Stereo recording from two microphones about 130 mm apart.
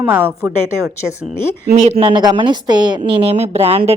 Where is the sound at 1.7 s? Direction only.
55° right (ahead or behind).